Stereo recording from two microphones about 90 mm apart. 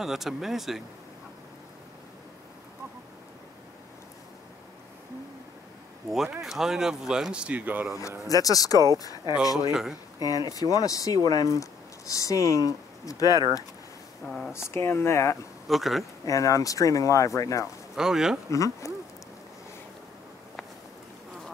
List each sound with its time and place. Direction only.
0.0 s speech: 5° right (ahead or behind)
6.0 s speech: 5° right (ahead or behind); by 7.9 s 20° right (ahead or behind)
8.3 s speech: 40° left (ahead or behind)
9.7 s speech: 5° right (ahead or behind)
10.2 s speech: 45° left (ahead or behind)
14.2 s speech: 5° left (ahead or behind)
14.7 s speech: 30° left (ahead or behind)
15.7 s speech: centre (ahead or behind)
16.3 s speech: 40° left (ahead or behind)
17.9 s speech: 5° right (ahead or behind)
18.5 s speech: 35° left (ahead or behind)